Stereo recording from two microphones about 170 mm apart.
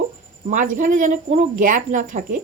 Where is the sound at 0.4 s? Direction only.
50° right (ahead or behind).